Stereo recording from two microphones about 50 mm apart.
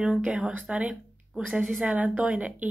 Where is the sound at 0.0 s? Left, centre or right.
Centre.